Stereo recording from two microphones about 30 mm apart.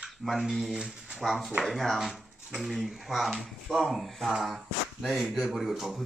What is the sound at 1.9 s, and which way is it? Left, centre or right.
Speech, centre.